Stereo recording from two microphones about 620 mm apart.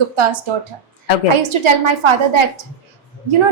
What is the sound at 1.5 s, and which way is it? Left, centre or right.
Speech, right.